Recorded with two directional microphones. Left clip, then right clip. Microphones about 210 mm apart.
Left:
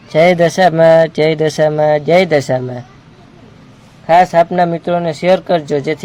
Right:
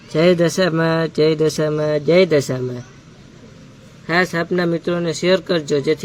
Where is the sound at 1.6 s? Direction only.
90° left.